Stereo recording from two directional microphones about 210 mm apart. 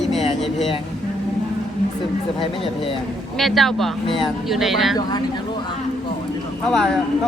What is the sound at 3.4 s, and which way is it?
Speech, centre (ahead or behind).